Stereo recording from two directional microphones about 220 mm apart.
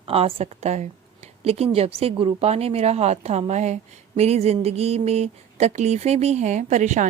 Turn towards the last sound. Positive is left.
turn(degrees=-30)  # may be behind; listen again after turning